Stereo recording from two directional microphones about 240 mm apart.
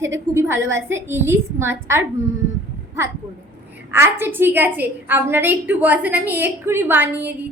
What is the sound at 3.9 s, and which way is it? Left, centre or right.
A woman's voice, centre.